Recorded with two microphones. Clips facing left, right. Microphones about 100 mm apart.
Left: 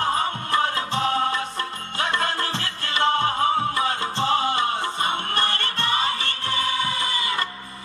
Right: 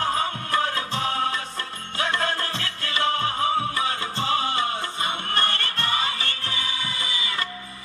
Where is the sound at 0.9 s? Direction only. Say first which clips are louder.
Left 4 dB; 35° left (ahead or behind).